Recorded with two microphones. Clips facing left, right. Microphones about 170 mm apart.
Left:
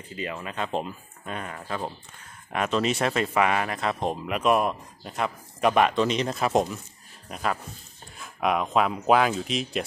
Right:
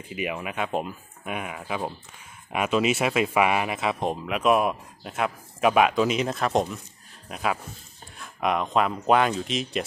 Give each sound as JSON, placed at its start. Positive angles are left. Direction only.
{"t": 0.1, "sound": "speech", "side_deg": -15}